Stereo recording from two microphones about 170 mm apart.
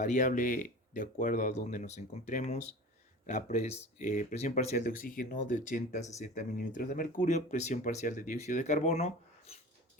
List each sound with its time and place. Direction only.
0.0 s speech: 45° left (ahead or behind)